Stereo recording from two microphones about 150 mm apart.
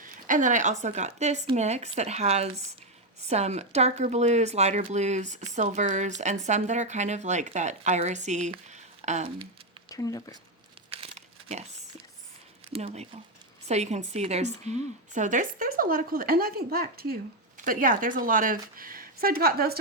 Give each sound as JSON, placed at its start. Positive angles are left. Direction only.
{"t": 0.0, "sound": "a woman's voice", "side_deg": -60}
{"t": 8.7, "sound": "a sound", "side_deg": -50}
{"t": 9.9, "sound": "speech", "side_deg": 25}
{"t": 10.8, "sound": "crumpling", "side_deg": -40}
{"t": 12.7, "sound": "a woman's voice", "side_deg": -45}
{"t": 17.6, "sound": "a woman's voice", "side_deg": -65}